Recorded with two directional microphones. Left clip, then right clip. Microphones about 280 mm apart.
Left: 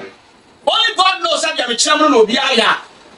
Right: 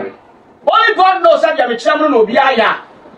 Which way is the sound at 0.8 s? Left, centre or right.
Centre.